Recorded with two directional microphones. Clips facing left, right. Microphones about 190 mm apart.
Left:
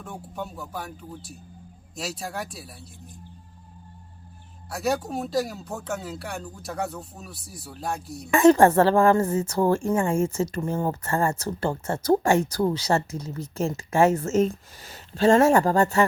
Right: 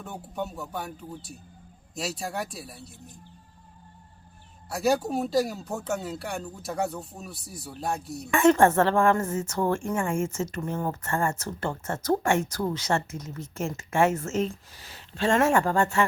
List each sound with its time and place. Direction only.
0.0 s speech: centre (ahead or behind)
2.0 s speech: centre (ahead or behind)
4.7 s speech: centre (ahead or behind)
8.3 s speech: 35° left (ahead or behind)